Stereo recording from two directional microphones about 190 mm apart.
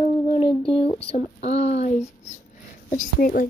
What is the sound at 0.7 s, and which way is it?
Speech, 30° left (ahead or behind).